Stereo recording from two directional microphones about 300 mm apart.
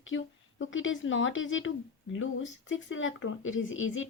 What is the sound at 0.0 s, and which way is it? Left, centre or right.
Speech, left.